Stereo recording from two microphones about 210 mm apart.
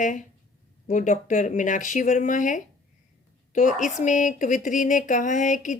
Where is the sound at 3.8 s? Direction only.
35° left (ahead or behind).